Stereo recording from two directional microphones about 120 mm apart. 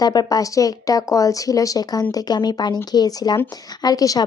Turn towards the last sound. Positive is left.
turn(degrees=30)  # may be behind; listen again after turning